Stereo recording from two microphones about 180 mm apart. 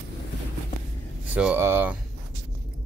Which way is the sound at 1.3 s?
10° right (ahead or behind).